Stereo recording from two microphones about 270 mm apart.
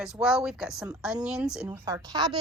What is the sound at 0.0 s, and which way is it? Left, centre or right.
Speech, centre.